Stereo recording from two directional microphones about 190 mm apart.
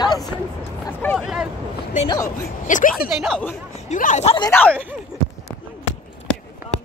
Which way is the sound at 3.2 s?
Centre (ahead or behind).